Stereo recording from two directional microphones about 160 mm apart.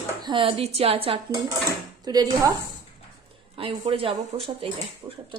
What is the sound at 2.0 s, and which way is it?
Speech, 25° right (ahead or behind).